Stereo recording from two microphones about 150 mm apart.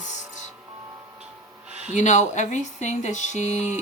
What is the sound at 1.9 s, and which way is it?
Speech, 55° left (ahead or behind).